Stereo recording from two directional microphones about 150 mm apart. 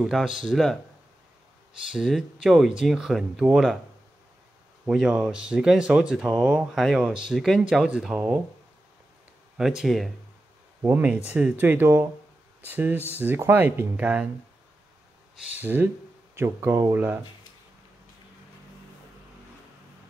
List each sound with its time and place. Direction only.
0.0 s speech: 5° right (ahead or behind)
1.9 s speech: 5° right (ahead or behind)
4.8 s speech: 5° right (ahead or behind)
9.6 s speech: 5° right (ahead or behind)
10.8 s speech: 10° right (ahead or behind)
15.5 s speech: 10° right (ahead or behind)